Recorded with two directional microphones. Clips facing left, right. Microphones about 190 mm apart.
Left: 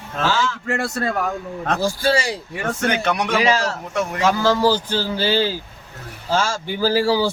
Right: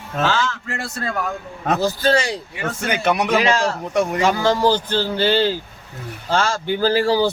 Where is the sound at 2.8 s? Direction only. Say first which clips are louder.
Right 2 dB; 10° right (ahead or behind).